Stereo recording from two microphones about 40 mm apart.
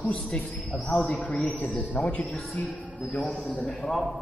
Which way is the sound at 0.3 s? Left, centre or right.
Left.